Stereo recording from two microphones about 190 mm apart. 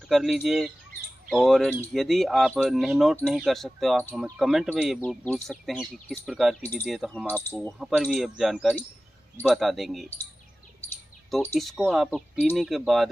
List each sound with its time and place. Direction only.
0.1 s speech: centre (ahead or behind)
11.2 s speech: centre (ahead or behind)